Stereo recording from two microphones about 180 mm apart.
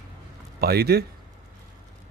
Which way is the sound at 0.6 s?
60° right (ahead or behind).